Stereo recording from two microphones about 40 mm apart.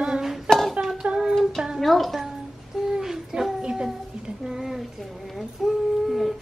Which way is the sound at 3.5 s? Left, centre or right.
Centre.